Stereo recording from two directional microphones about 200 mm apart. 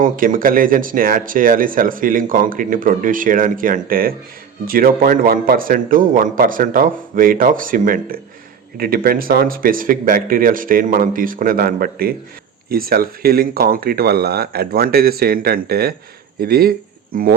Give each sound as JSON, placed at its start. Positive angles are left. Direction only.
{"t": 0.0, "sound": "speech", "side_deg": -45}